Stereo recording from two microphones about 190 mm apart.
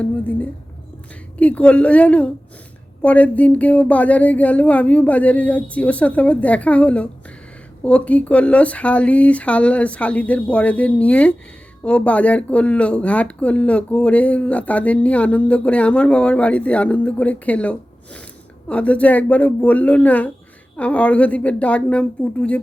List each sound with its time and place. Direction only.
0.0 s speech: 5° left (ahead or behind)